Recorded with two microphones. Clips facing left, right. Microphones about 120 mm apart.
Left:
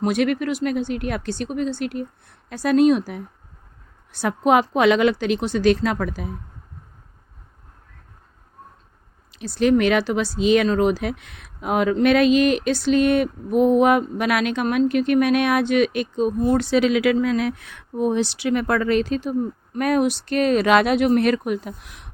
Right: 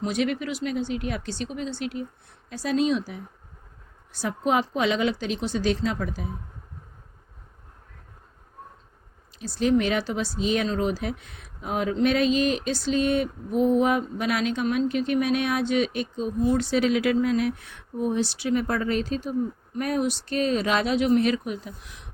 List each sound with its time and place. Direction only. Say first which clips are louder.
0.0 s speech: left 6 dB; 60° left (ahead or behind)
9.3 s speech: left 4 dB; 70° left (ahead or behind)
16.7 s speech: left 4 dB; 90° left; by 22.1 s 60° left (ahead or behind)